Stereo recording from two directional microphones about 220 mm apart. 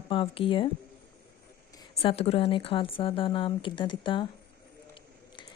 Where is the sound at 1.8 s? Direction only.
25° left (ahead or behind).